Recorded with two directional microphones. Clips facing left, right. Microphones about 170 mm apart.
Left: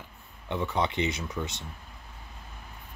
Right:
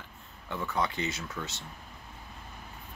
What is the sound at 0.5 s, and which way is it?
Speech, 20° left (ahead or behind).